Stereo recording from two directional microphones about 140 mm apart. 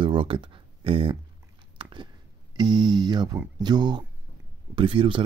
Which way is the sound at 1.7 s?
35° right (ahead or behind).